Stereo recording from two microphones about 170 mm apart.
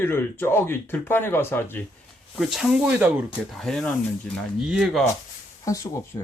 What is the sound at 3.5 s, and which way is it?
Speech, centre (ahead or behind).